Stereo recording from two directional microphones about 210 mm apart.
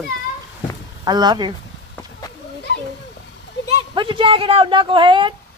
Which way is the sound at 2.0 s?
15° left (ahead or behind).